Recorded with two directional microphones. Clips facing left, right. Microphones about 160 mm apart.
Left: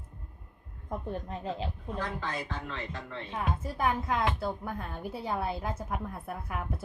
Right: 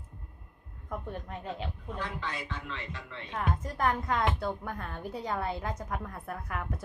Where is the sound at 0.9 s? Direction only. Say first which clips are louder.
Left 2 dB; 30° left (ahead or behind).